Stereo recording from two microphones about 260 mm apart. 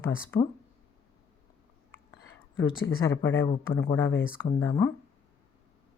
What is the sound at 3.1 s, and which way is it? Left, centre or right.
Speech, centre.